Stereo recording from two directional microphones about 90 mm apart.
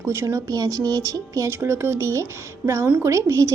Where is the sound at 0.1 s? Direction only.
30° right (ahead or behind).